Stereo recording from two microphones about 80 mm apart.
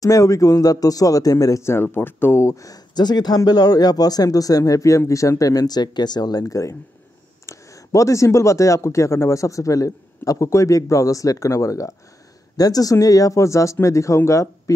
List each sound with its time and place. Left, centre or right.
0.0 s speech: left
2.9 s speech: left
6.4 s speech: left